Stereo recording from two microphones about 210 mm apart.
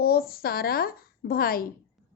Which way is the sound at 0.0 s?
45° left (ahead or behind).